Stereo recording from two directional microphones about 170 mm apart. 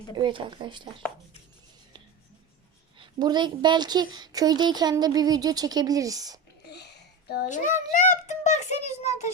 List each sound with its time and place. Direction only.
0.2 s a woman's voice: 30° right (ahead or behind)
3.0 s a woman's voice: 25° right (ahead or behind)
6.7 s a sound: 80° left
7.4 s a child's voice: 50° left (ahead or behind)